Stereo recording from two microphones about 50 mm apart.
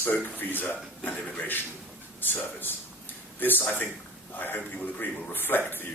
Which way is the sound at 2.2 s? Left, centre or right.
Left.